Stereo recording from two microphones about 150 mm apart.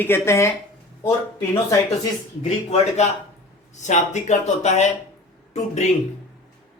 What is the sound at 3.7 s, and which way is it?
Speech, 55° left (ahead or behind).